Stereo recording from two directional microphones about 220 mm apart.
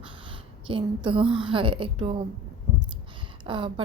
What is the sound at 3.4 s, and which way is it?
Speech, 20° right (ahead or behind).